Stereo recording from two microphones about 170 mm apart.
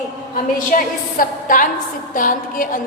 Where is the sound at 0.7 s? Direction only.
55° left (ahead or behind).